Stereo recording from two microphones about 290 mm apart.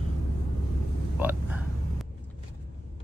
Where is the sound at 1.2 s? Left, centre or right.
Centre.